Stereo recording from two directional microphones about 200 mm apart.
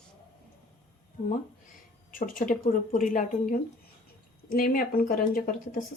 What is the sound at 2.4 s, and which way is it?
Speech, 40° left (ahead or behind).